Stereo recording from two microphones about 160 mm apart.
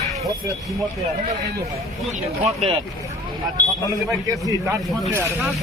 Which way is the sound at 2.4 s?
45° right (ahead or behind).